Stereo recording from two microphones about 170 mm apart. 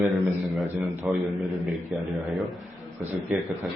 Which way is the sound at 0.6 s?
5° right (ahead or behind).